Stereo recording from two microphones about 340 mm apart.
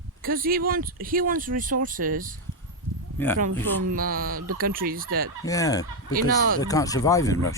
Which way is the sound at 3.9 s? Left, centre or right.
Right.